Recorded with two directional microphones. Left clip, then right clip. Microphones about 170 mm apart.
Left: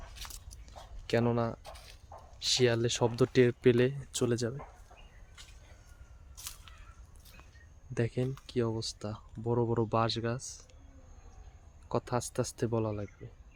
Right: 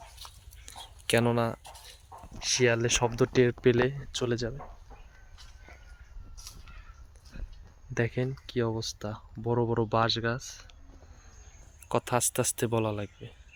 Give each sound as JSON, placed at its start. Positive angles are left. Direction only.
{"t": 0.2, "sound": "dog", "side_deg": 55}
{"t": 0.6, "sound": "a sound", "side_deg": -5}
{"t": 2.1, "sound": "a sound", "side_deg": 70}
{"t": 2.5, "sound": "speech", "side_deg": 5}
{"t": 7.9, "sound": "speech", "side_deg": 5}
{"t": 11.9, "sound": "speech", "side_deg": -5}